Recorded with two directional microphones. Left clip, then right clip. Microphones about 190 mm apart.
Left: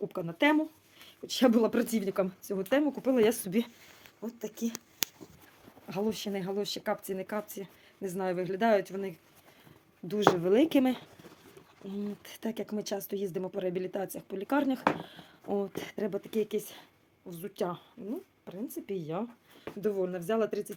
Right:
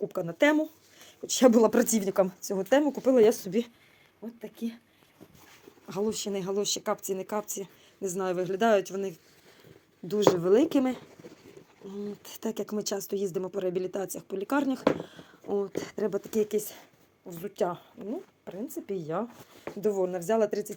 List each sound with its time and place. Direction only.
0.1 s speech: 5° left (ahead or behind)
3.2 s speech: 15° left (ahead or behind)
4.2 s speech: centre (ahead or behind)
5.9 s speech: 15° left (ahead or behind)
11.8 s speech: 30° left (ahead or behind)
12.2 s speech: centre (ahead or behind)